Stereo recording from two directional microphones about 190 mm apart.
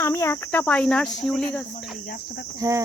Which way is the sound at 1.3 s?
5° left (ahead or behind).